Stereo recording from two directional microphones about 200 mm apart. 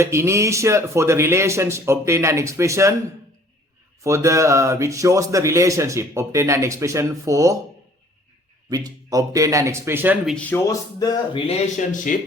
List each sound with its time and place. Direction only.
0.0 s speech: 15° right (ahead or behind)
4.0 s speech: 15° right (ahead or behind)
8.7 s speech: 15° right (ahead or behind)
10.3 s speech: 10° left (ahead or behind)
11.4 s speech: 40° left (ahead or behind)